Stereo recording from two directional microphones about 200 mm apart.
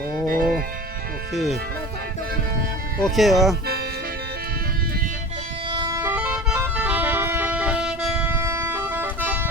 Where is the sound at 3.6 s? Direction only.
50° right (ahead or behind).